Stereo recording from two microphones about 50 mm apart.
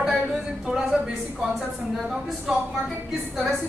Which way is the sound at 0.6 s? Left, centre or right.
Centre.